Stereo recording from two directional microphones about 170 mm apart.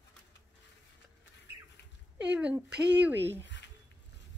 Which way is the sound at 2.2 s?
5° right (ahead or behind).